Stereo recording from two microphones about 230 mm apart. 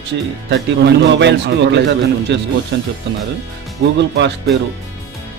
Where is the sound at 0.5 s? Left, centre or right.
Right.